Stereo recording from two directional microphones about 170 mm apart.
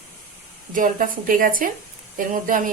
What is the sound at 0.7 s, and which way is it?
Speech, 50° right (ahead or behind).